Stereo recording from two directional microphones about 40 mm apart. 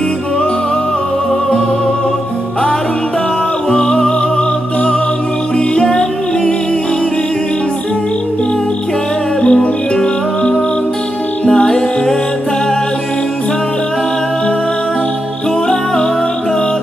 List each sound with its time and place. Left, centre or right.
3.7 s music: left
5.8 s music: centre
9.4 s music: left
11.4 s music: centre